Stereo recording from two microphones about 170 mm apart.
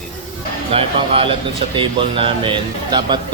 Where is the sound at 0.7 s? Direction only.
35° right (ahead or behind).